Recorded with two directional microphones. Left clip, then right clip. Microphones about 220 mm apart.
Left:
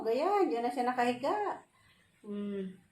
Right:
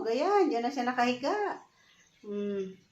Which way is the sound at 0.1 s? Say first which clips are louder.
Right 3 dB; 15° right (ahead or behind).